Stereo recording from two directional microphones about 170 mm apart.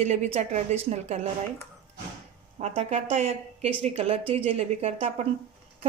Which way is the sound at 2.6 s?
40° right (ahead or behind).